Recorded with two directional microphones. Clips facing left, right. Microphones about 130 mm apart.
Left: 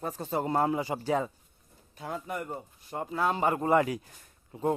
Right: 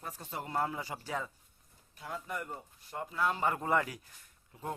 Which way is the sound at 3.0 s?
30° left (ahead or behind).